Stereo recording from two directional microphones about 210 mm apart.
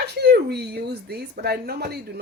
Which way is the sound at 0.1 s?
50° right (ahead or behind).